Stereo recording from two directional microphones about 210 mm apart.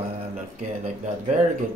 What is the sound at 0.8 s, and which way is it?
Speech, 35° right (ahead or behind).